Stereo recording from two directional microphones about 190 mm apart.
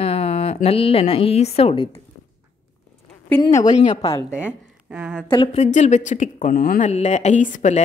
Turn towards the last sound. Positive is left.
turn(degrees=40)  # may be behind; listen again after turning